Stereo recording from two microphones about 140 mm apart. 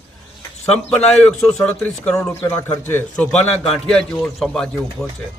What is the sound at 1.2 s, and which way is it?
A man's voice, 5° left (ahead or behind).